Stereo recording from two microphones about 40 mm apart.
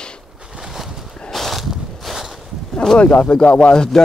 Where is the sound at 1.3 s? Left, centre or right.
Centre.